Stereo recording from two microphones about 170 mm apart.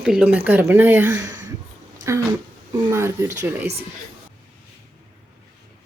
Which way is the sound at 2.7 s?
15° right (ahead or behind).